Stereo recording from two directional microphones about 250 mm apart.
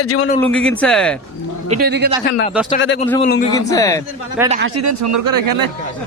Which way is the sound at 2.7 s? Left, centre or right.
Left.